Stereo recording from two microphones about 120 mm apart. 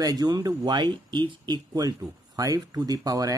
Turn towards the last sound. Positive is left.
turn(degrees=-30)  # may be behind; listen again after turning